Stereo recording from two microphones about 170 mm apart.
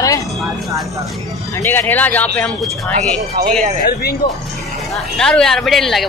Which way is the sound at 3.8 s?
65° left (ahead or behind).